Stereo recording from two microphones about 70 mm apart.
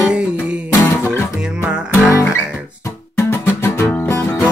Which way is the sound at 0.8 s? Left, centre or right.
Left.